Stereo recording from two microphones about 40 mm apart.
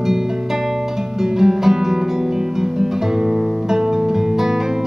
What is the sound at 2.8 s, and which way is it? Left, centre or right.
Guitar, centre.